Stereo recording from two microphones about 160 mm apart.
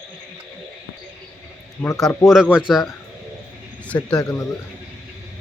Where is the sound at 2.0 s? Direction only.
Centre (ahead or behind).